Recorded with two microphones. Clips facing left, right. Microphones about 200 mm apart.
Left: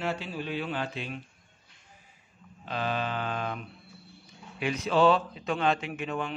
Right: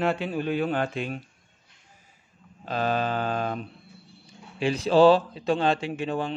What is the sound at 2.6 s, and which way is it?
Mantra, 40° right (ahead or behind).